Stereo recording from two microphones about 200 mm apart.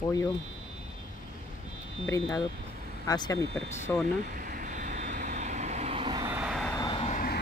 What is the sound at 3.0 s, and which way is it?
Speech, 20° left (ahead or behind).